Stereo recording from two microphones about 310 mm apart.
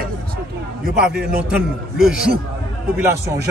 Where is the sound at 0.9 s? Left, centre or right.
Right.